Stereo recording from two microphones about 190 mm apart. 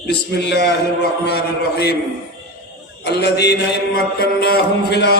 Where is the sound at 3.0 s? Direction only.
60° left (ahead or behind).